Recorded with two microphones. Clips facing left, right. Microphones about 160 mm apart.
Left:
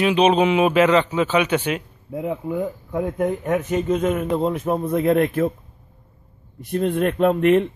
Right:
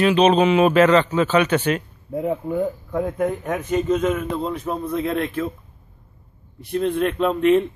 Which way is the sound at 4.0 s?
45° left (ahead or behind).